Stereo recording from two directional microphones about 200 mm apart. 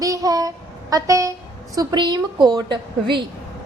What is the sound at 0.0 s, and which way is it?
Child singing, 15° right (ahead or behind).